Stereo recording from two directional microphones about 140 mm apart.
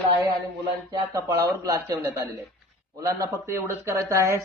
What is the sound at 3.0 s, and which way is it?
Speech, 20° right (ahead or behind).